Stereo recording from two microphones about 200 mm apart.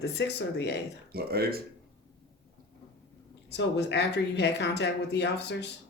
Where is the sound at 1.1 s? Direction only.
50° right (ahead or behind).